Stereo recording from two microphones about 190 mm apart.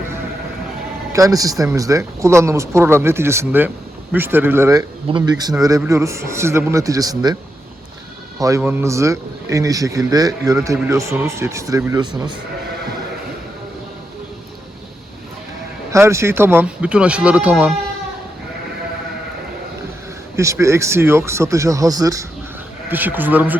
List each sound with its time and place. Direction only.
1.1 s a man's voice: 15° right (ahead or behind)
8.4 s a man's voice: 15° right (ahead or behind)
15.9 s a man's voice: 15° right (ahead or behind)
20.3 s a man's voice: 15° right (ahead or behind)